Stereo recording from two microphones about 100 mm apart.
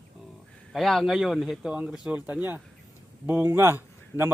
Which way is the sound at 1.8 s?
15° right (ahead or behind).